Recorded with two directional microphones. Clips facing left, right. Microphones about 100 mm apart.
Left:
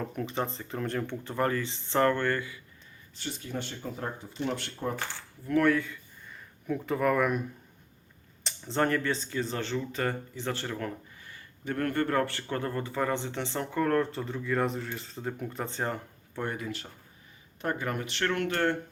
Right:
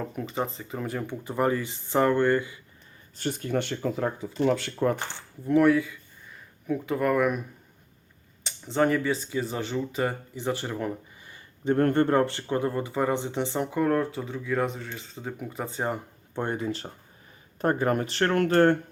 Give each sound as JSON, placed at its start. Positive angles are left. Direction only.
{"t": 0.0, "sound": "speech", "side_deg": -5}
{"t": 3.2, "sound": "speech", "side_deg": -50}
{"t": 5.5, "sound": "speech", "side_deg": -20}
{"t": 5.7, "sound": "speech", "side_deg": -5}
{"t": 8.4, "sound": "speech", "side_deg": -5}
{"t": 16.3, "sound": "speech", "side_deg": -30}